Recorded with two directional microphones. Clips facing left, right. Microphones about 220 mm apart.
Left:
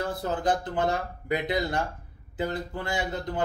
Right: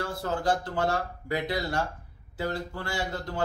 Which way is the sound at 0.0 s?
20° left (ahead or behind).